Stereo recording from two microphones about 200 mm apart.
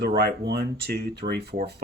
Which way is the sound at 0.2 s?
50° right (ahead or behind).